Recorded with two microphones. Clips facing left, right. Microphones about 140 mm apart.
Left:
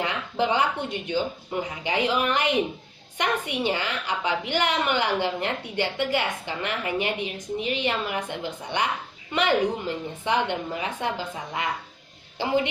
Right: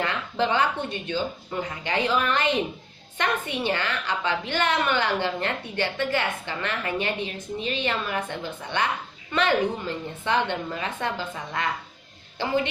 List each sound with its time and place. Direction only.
0.0 s a woman's voice: 15° left (ahead or behind)